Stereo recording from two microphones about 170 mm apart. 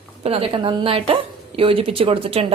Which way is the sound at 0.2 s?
35° right (ahead or behind).